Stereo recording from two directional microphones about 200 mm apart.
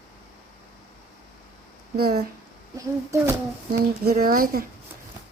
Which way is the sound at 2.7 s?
15° right (ahead or behind).